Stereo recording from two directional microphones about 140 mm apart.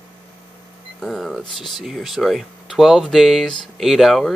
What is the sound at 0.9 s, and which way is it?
Speech, centre (ahead or behind).